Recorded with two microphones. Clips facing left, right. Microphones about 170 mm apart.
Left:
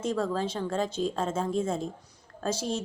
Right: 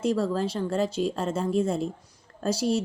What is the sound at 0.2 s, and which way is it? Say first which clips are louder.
Speech: right 3 dB; 5° right (ahead or behind).